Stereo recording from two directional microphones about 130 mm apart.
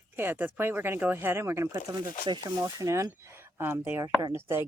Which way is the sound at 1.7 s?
35° right (ahead or behind).